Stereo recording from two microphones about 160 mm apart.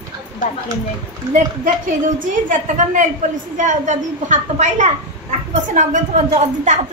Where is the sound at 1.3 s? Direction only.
55° right (ahead or behind).